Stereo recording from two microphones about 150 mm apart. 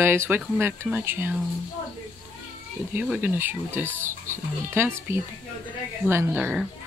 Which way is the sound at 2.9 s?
10° right (ahead or behind).